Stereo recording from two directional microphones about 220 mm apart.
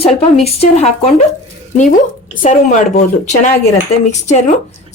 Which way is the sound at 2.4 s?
35° left (ahead or behind).